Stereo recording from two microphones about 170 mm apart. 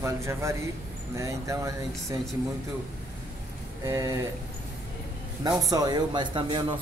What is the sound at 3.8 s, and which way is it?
Speech, 20° right (ahead or behind).